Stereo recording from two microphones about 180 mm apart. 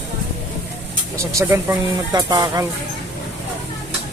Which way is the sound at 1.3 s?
15° right (ahead or behind).